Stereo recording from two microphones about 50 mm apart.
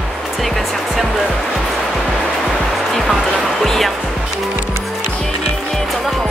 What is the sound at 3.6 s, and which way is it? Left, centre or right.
Music, centre.